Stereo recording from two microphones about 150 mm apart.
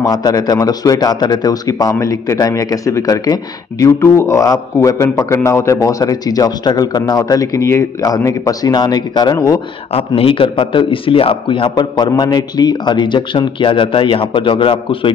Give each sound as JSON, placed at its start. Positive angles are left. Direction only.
{"t": 0.0, "sound": "a man's voice", "side_deg": 25}
{"t": 9.9, "sound": "speech", "side_deg": 40}